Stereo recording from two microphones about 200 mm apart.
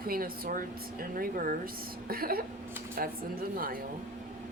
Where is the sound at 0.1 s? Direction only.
45° right (ahead or behind).